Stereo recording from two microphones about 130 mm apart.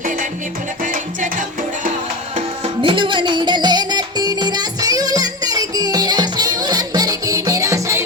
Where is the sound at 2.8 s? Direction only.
40° right (ahead or behind).